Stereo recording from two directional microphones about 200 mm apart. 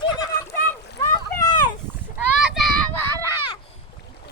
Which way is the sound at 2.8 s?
10° left (ahead or behind).